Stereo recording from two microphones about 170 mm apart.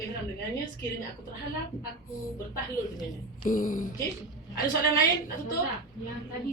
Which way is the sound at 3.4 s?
55° left (ahead or behind).